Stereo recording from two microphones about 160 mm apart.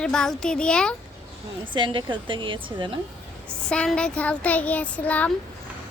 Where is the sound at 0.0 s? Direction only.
5° left (ahead or behind).